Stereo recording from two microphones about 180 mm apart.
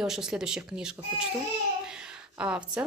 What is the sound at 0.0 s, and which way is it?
A woman's voice, 5° right (ahead or behind).